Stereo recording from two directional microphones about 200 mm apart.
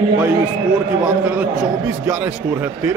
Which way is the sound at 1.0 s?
5° right (ahead or behind).